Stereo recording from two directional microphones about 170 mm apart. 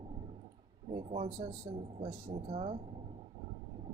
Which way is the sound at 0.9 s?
35° right (ahead or behind).